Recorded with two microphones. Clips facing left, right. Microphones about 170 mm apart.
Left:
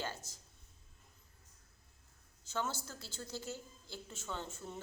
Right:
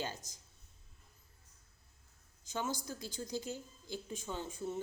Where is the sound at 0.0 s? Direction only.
15° right (ahead or behind).